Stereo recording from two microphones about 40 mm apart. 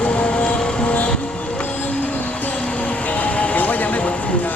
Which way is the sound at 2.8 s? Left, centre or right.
Left.